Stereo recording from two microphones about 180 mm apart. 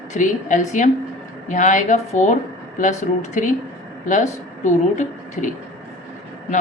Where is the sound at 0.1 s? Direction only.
45° left (ahead or behind).